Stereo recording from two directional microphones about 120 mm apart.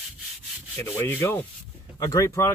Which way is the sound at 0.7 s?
25° left (ahead or behind).